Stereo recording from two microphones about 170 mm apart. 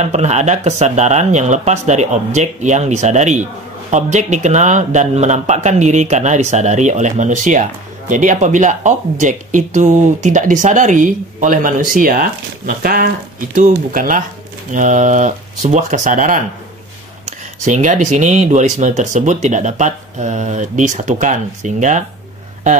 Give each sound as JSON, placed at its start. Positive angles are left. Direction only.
{"t": 0.0, "sound": "speech", "side_deg": -40}
{"t": 17.6, "sound": "speech", "side_deg": -45}